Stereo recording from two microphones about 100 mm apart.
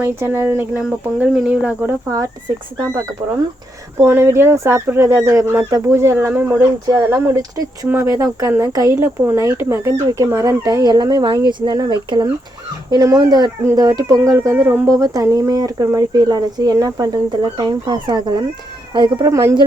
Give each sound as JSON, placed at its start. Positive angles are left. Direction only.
{"t": 0.0, "sound": "speech", "side_deg": -25}
{"t": 2.0, "sound": "speech", "side_deg": -35}
{"t": 3.9, "sound": "speech", "side_deg": -25}
{"t": 7.2, "sound": "speech", "side_deg": -35}
{"t": 7.9, "sound": "speech", "side_deg": -25}
{"t": 14.8, "sound": "speech", "side_deg": -35}
{"t": 19.3, "sound": "speech", "side_deg": -30}